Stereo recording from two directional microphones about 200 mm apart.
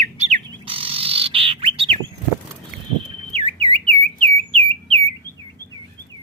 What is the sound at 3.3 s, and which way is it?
Bird, 30° right (ahead or behind).